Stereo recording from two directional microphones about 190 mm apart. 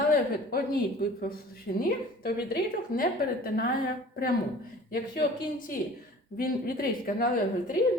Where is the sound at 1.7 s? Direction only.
50° left (ahead or behind).